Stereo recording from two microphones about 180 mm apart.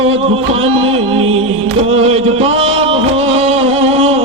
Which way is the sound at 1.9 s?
35° right (ahead or behind).